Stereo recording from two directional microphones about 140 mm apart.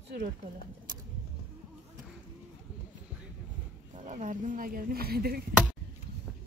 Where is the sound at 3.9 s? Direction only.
60° right (ahead or behind); by 5.4 s 90° right.